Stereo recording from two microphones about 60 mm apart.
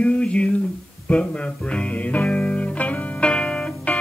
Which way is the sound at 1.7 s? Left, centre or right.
Left.